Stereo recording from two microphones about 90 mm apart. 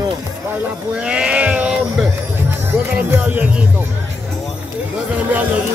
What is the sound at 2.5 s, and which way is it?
Music, 20° right (ahead or behind).